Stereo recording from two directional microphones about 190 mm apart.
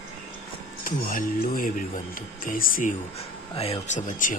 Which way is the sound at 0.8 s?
50° left (ahead or behind).